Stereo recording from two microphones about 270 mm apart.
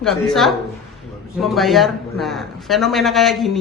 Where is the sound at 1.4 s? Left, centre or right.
Centre.